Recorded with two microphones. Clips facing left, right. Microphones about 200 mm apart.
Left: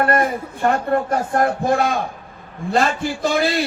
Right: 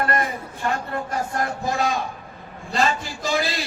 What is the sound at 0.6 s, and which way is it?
A man's voice, 55° left (ahead or behind).